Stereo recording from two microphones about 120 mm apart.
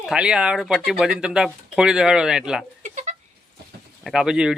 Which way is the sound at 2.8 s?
85° right.